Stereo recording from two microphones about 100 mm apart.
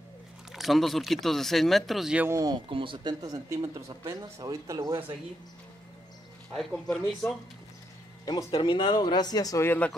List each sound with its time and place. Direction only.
0.5 s speech: centre (ahead or behind)
2.5 s speech: 60° right (ahead or behind)
3.2 s speech: 35° right (ahead or behind)
6.5 s speech: 5° left (ahead or behind)
8.5 s speech: 55° left (ahead or behind); by 9.6 s 40° left (ahead or behind)
9.6 s speech: 20° left (ahead or behind)